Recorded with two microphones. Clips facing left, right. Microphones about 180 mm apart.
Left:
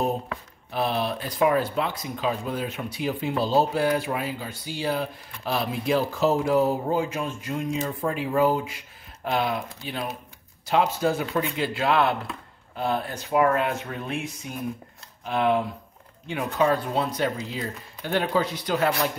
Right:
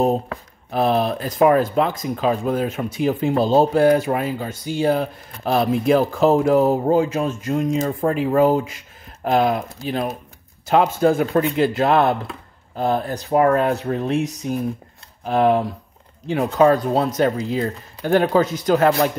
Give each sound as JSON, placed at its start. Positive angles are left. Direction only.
{"t": 0.0, "sound": "speech", "side_deg": -45}